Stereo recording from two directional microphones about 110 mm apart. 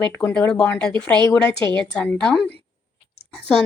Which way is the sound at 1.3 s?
20° left (ahead or behind).